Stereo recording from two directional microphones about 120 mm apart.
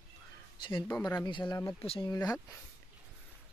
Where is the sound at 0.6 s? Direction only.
40° left (ahead or behind).